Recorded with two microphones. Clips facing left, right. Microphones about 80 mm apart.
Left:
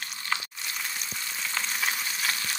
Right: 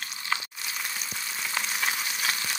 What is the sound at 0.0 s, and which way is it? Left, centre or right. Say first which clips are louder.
Frying: right 1 dB; centre.